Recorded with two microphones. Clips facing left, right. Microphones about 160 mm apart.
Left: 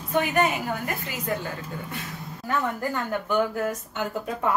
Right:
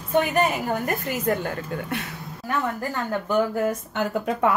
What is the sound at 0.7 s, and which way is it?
Speech, 45° right (ahead or behind).